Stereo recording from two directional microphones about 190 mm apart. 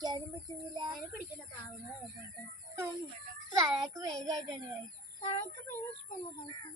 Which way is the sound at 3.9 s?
20° right (ahead or behind).